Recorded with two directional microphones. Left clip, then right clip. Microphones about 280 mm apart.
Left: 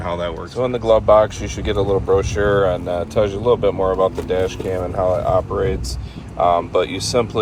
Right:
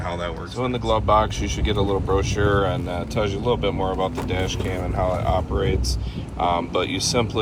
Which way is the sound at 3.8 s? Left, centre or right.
Left.